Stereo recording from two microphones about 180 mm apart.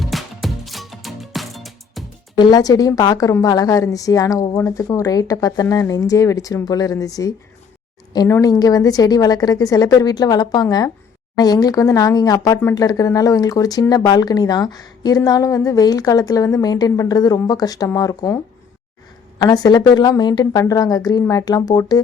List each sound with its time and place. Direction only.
0.0 s music: centre (ahead or behind)
2.4 s speech: 20° left (ahead or behind)
19.4 s speech: 20° left (ahead or behind)